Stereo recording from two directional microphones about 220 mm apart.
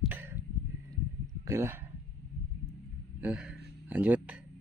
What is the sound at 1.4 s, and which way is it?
Speech, 15° right (ahead or behind).